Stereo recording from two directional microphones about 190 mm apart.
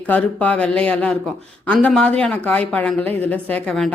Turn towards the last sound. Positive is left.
turn(degrees=5)  # may be behind; listen again after turning